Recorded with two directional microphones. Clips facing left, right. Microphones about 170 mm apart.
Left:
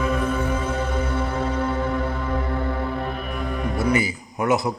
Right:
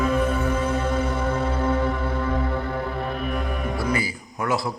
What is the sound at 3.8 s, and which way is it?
Speech, 20° left (ahead or behind).